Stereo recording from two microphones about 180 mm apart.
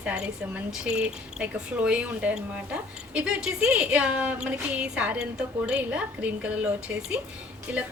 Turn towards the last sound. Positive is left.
turn(degrees=-10)  # may be behind; listen again after turning